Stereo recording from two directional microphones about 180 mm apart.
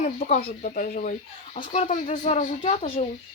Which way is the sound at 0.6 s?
50° left (ahead or behind).